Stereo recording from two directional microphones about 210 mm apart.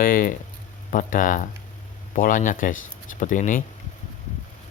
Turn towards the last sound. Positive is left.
turn(degrees=40)  # may be behind; listen again after turning